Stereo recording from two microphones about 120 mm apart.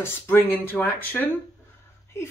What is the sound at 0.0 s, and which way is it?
Speech, 20° left (ahead or behind).